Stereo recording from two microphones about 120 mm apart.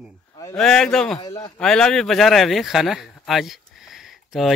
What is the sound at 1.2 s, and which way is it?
Speech, 35° left (ahead or behind).